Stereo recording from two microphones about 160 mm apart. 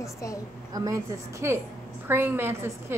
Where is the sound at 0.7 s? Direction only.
25° right (ahead or behind).